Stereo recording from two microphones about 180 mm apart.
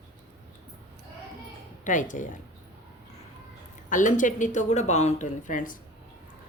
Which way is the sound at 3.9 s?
45° left (ahead or behind).